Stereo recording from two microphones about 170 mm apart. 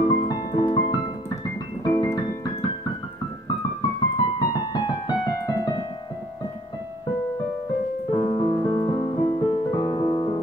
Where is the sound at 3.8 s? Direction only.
25° left (ahead or behind).